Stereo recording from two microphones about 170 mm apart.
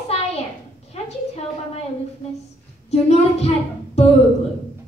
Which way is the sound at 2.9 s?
35° left (ahead or behind).